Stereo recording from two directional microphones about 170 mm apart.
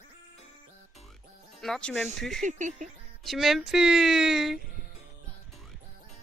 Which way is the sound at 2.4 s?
45° right (ahead or behind).